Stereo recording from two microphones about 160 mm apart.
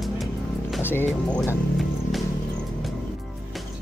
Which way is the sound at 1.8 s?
Centre (ahead or behind).